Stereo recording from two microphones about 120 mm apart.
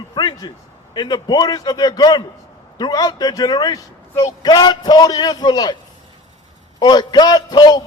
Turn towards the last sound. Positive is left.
turn(degrees=35)  # may be behind; listen again after turning